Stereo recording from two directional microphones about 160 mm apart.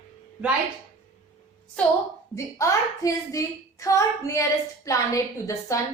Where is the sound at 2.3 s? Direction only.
20° left (ahead or behind).